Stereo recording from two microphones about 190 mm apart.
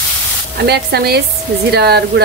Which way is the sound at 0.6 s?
60° right (ahead or behind).